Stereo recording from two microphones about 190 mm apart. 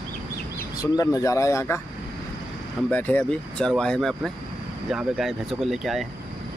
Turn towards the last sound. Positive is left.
turn(degrees=0)  # may be behind; listen again after turning